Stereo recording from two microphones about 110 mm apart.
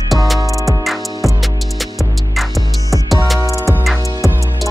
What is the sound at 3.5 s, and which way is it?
Music, 30° right (ahead or behind).